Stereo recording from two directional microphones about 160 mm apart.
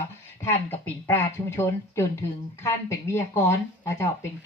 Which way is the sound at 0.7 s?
10° left (ahead or behind).